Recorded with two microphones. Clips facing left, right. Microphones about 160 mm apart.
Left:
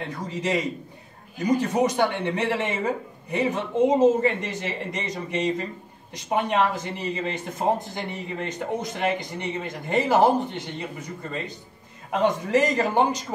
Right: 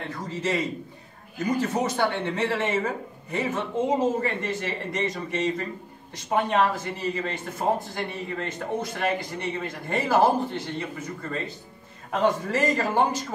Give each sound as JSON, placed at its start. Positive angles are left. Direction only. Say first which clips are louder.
{"t": 0.3, "sound": "speech", "louder": "left 1 dB", "side_deg": 15}